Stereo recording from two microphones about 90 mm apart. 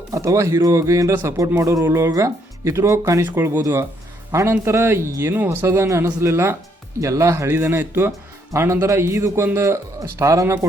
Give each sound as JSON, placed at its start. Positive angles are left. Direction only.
{"t": 0.1, "sound": "a man's voice", "side_deg": -35}
{"t": 1.8, "sound": "a man's voice", "side_deg": -25}